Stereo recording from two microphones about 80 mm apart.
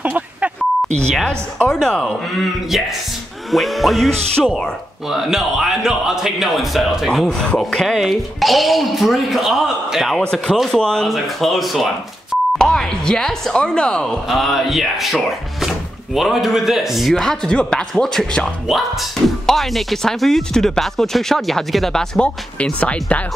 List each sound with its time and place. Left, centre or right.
0.0 s beep: centre
1.2 s speech: centre
3.5 s a man's voice: centre
5.1 s a man's voice: centre
14.3 s a man's voice: centre